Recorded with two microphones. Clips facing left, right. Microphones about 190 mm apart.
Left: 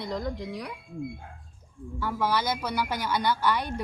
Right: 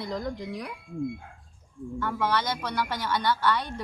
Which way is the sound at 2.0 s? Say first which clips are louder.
Left 1 dB; 10° left (ahead or behind).